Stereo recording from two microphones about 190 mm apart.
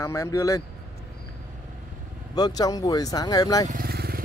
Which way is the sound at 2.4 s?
20° left (ahead or behind).